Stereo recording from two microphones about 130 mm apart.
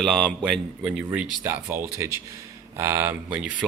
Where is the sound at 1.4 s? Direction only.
15° right (ahead or behind).